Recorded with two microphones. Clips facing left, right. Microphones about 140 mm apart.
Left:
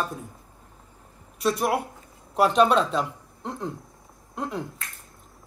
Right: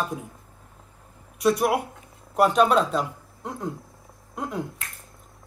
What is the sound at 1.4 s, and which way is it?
Speech, 5° right (ahead or behind).